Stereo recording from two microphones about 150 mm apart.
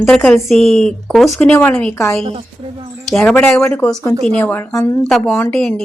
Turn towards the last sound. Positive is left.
turn(degrees=5)  # may be behind; listen again after turning